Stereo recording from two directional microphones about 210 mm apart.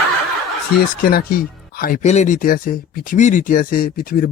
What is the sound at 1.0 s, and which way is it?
Speech, 45° left (ahead or behind).